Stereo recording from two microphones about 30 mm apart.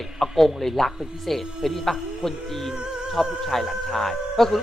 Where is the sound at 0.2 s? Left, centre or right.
Centre.